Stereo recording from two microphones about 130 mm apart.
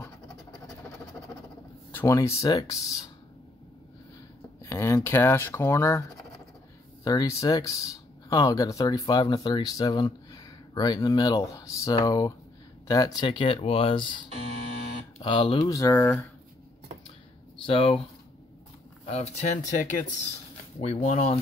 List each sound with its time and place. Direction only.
2.0 s speech: 25° left (ahead or behind)
4.6 s speech: 20° left (ahead or behind)
7.1 s speech: 25° left (ahead or behind)
15.6 s speech: 25° left (ahead or behind)
17.6 s speech: 40° left (ahead or behind)
19.0 s speech: 55° left (ahead or behind)
19.7 s speech: 80° left
20.8 s speech: 60° left (ahead or behind)